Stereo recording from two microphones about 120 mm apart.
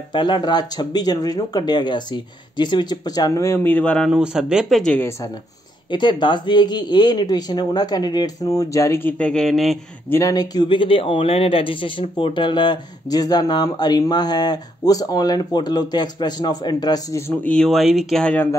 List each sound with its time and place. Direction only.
0.1 s speech: 40° left (ahead or behind); by 3.9 s 15° left (ahead or behind)
4.1 s speech: 5° right (ahead or behind)
5.9 s speech: 40° left (ahead or behind); by 9.3 s 20° left (ahead or behind)
9.3 s speech: 5° left (ahead or behind)
10.0 s speech: 20° left (ahead or behind)
10.3 s speech: 35° left (ahead or behind)
17.3 s speech: 10° left (ahead or behind)